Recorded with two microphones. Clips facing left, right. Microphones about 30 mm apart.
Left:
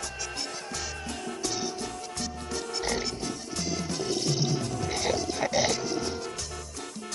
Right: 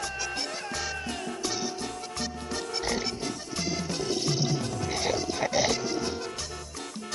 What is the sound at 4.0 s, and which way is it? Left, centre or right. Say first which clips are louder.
Music: even; centre.